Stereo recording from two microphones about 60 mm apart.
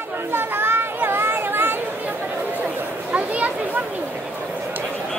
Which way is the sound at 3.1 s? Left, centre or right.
Right.